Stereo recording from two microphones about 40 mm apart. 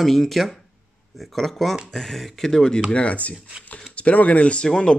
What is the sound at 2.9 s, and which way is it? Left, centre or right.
Speech, left.